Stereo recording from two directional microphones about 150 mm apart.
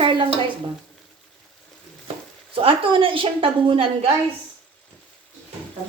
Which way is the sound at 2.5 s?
35° right (ahead or behind).